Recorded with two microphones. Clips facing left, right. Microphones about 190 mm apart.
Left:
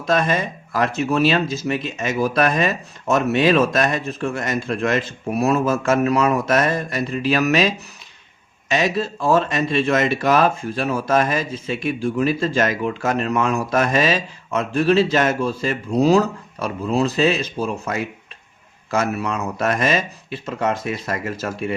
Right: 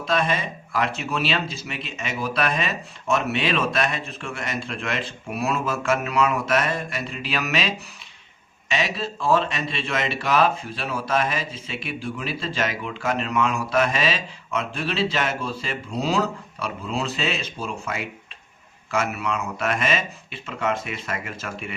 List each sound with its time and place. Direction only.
0.0 s speech: 45° left (ahead or behind)
8.7 s speech: 45° left (ahead or behind)